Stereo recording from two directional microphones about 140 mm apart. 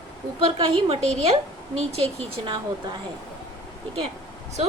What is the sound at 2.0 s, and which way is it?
Speech, 40° right (ahead or behind).